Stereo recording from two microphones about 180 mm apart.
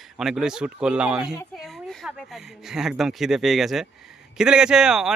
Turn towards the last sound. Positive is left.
turn(degrees=-5)  # may be behind; listen again after turning